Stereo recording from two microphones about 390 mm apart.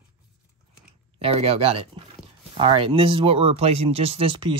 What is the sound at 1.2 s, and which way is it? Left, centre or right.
Speech, centre.